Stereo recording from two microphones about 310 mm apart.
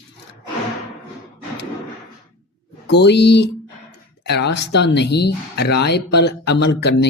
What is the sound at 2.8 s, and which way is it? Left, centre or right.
Speech, left.